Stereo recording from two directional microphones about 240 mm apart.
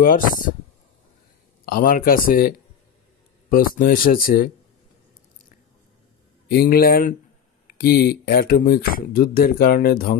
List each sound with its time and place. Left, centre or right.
0.0 s speech: left
1.7 s speech: left
6.5 s speech: left